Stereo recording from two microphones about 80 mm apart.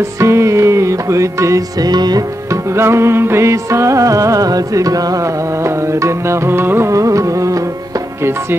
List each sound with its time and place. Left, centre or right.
0.2 s music: right
1.9 s music: right
2.7 s music: right
5.9 s music: right
6.9 s music: right